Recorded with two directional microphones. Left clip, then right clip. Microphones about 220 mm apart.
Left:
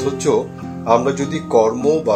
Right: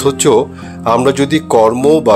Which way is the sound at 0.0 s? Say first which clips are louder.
Right 7 dB; 40° right (ahead or behind).